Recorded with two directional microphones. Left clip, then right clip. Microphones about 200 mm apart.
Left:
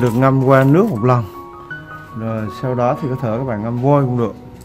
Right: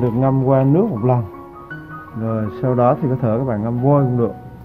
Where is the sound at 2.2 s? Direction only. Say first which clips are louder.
Right 1 dB; centre (ahead or behind).